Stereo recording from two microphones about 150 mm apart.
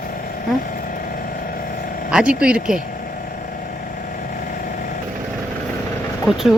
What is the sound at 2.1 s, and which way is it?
Speech, 5° right (ahead or behind).